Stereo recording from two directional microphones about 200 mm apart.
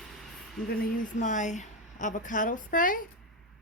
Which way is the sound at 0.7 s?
40° left (ahead or behind).